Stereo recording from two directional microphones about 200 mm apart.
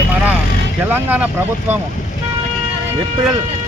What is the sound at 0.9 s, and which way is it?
Speech, 10° right (ahead or behind).